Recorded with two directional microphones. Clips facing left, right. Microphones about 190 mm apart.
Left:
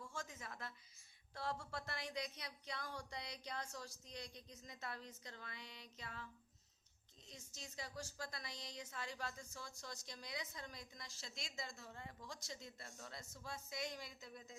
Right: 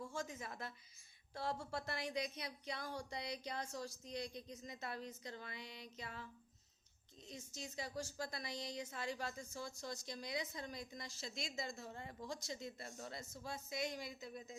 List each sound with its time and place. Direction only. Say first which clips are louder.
0.2 s a woman's voice: right 3 dB; 15° right (ahead or behind)
7.3 s a woman's voice: right 7 dB; 10° right (ahead or behind)
12.3 s a woman's voice: right 6 dB; 15° right (ahead or behind)